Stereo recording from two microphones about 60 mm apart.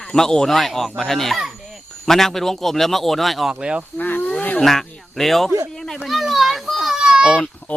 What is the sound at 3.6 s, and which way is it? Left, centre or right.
Speech, centre.